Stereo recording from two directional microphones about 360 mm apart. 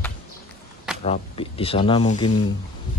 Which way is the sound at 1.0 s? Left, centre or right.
Centre.